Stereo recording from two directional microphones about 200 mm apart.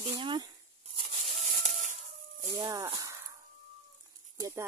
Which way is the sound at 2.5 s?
15° right (ahead or behind).